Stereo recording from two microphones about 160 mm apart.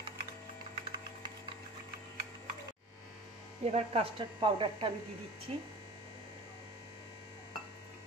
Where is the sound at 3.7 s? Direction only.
35° right (ahead or behind).